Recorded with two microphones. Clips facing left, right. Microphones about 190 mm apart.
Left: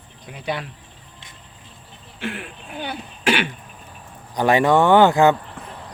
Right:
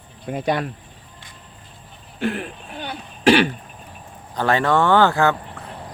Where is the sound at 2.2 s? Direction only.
40° right (ahead or behind).